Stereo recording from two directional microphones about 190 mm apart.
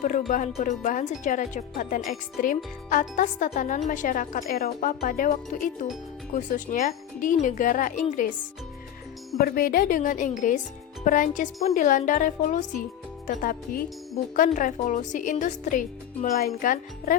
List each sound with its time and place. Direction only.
0.0 s a woman's voice: 45° left (ahead or behind)
9.4 s a woman's voice: 50° left (ahead or behind)